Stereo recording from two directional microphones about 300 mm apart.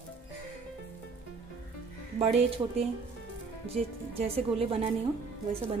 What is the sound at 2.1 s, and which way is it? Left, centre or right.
Speech, centre.